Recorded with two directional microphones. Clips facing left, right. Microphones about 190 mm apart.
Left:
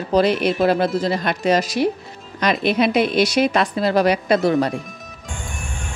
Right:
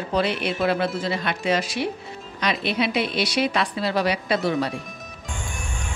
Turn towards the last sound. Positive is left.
turn(degrees=45)  # may be behind; listen again after turning